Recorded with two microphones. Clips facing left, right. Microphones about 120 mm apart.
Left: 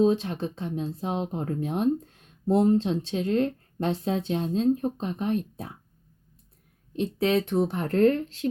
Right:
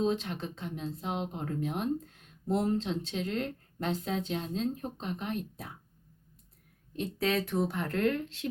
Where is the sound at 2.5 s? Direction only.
25° left (ahead or behind).